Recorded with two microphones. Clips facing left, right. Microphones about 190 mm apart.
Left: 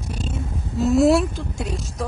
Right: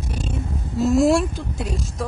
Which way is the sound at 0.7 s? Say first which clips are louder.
Left 1 dB; centre (ahead or behind).